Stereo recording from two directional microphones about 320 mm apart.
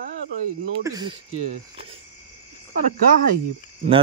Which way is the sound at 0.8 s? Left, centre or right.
Centre.